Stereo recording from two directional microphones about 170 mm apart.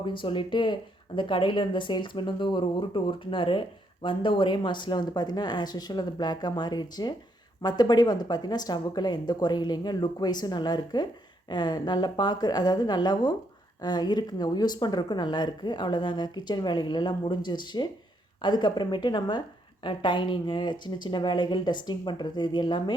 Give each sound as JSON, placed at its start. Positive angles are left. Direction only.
{"t": 0.0, "sound": "speech", "side_deg": 30}